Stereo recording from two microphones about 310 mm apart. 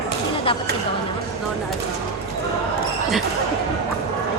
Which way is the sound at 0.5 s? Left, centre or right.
Centre.